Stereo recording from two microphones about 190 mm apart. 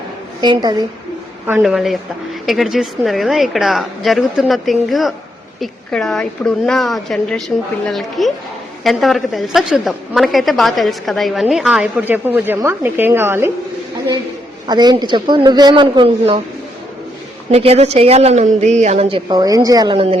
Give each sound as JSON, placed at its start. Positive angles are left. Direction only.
{"t": 0.4, "sound": "speech", "side_deg": -20}
{"t": 1.5, "sound": "a woman's voice", "side_deg": -5}
{"t": 14.7, "sound": "speech", "side_deg": -20}
{"t": 17.5, "sound": "speech", "side_deg": -35}